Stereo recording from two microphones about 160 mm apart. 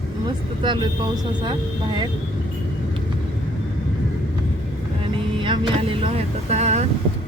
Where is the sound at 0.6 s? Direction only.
30° right (ahead or behind).